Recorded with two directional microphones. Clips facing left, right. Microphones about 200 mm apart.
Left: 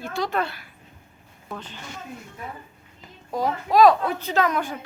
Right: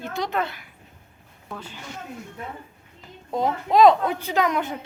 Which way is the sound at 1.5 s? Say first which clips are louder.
Left 1 dB; 10° right (ahead or behind).